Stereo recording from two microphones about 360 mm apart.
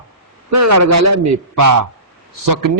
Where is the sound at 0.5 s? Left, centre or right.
Right.